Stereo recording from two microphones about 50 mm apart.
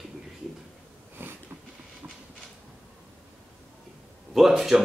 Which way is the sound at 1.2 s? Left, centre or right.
Right.